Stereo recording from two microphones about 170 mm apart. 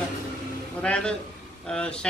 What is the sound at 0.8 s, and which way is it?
A man's voice, 5° left (ahead or behind).